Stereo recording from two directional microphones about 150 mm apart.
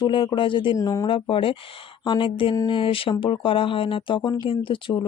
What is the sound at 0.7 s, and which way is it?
Speech, 20° left (ahead or behind).